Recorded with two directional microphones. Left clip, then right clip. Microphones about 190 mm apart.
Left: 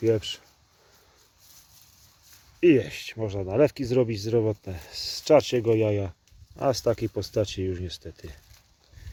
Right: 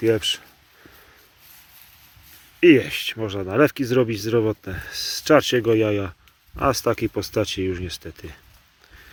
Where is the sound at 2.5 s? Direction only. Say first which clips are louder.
Right 6 dB; 5° right (ahead or behind).